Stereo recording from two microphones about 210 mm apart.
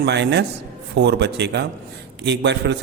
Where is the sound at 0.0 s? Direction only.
55° right (ahead or behind).